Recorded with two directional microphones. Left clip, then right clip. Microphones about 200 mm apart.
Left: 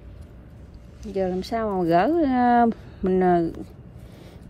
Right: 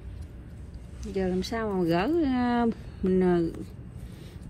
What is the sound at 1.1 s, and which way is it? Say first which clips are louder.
Speech: left 4 dB; 50° left (ahead or behind).